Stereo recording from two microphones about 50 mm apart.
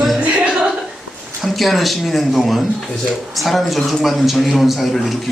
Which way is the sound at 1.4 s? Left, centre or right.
Centre.